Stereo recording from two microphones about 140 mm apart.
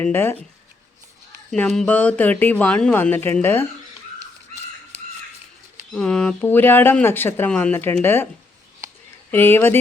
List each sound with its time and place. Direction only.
0.0 s speech: 15° left (ahead or behind)
1.5 s speech: 5° left (ahead or behind)
5.9 s speech: 5° left (ahead or behind)
9.3 s speech: 15° left (ahead or behind)